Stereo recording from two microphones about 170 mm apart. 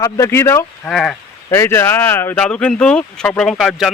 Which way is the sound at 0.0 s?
15° left (ahead or behind).